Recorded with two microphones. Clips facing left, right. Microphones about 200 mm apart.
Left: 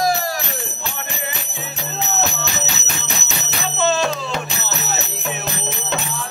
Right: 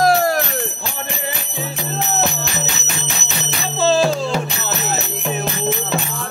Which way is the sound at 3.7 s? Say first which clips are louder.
Right 4 dB; 30° right (ahead or behind).